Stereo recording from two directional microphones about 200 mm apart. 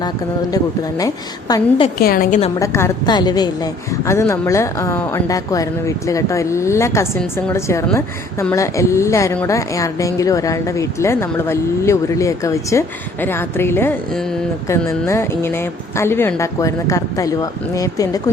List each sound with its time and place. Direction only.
0.5 s a woman's voice: 20° left (ahead or behind)
2.0 s a woman's voice: 45° left (ahead or behind)
2.6 s a woman's voice: 15° left (ahead or behind)
15.0 s a woman's voice: 10° left (ahead or behind)